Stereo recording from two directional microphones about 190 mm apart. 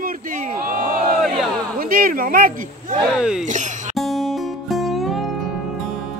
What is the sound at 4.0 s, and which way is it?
Music, centre (ahead or behind).